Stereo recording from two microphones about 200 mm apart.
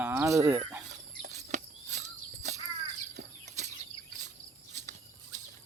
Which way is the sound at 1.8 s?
60° right (ahead or behind).